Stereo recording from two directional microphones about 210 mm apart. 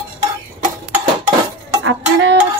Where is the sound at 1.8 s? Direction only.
60° right (ahead or behind).